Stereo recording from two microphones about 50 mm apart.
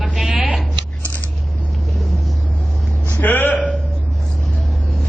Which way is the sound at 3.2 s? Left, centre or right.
Left.